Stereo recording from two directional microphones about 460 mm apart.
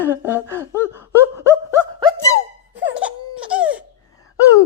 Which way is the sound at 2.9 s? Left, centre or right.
Centre.